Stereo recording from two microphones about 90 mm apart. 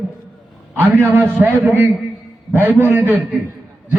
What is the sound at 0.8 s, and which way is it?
A man's voice, 25° right (ahead or behind).